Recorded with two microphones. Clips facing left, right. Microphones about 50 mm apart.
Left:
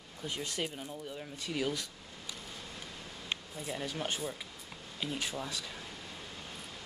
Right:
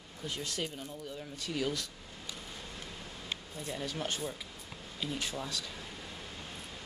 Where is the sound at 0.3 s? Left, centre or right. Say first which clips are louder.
Left 1 dB; centre.